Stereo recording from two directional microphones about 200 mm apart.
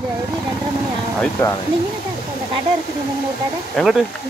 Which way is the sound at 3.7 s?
Centre (ahead or behind).